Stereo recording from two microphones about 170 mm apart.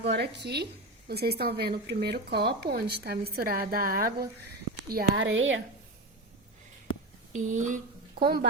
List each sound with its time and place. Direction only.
0.1 s a woman's voice: 85° right; by 4.3 s 60° right (ahead or behind)
4.9 s speech: 75° right (ahead or behind)
7.3 s speech: 45° right (ahead or behind); by 8.4 s 65° right (ahead or behind)